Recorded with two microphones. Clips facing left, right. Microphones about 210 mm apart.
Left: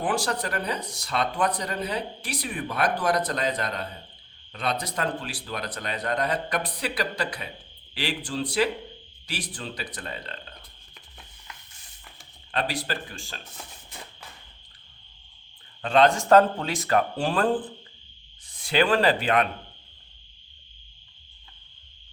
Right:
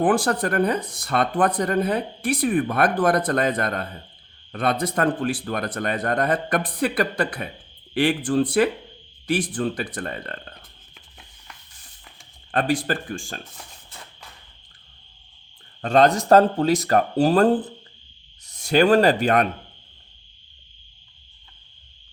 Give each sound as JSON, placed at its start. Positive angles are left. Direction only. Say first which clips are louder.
{"t": 0.0, "sound": "speech", "louder": "right 7 dB", "side_deg": -50}
{"t": 12.5, "sound": "speech", "louder": "right 7 dB", "side_deg": -50}
{"t": 15.8, "sound": "speech", "louder": "right 3 dB", "side_deg": -45}